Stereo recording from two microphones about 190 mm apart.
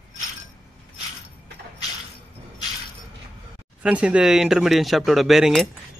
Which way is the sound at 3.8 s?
5° right (ahead or behind).